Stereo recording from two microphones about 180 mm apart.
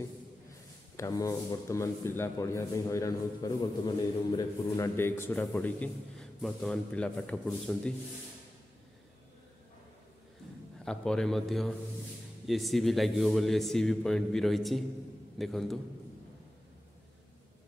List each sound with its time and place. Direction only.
0.9 s a man's voice: 15° left (ahead or behind)
10.8 s a man's voice: 5° left (ahead or behind)